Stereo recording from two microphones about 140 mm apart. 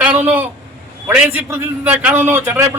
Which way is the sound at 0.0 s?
10° right (ahead or behind).